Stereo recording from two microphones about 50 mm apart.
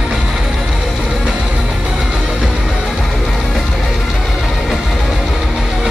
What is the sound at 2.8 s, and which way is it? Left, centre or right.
Music, centre.